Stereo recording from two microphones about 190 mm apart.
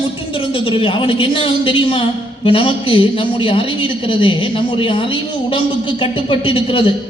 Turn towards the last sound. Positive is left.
turn(degrees=25)  # may be behind; listen again after turning